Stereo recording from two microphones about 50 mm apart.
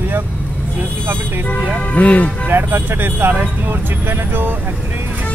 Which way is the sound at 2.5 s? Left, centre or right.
Right.